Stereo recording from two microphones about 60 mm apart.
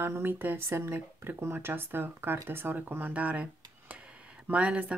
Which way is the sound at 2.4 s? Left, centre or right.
Right.